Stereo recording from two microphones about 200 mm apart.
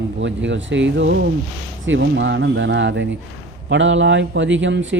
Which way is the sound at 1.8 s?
65° right (ahead or behind).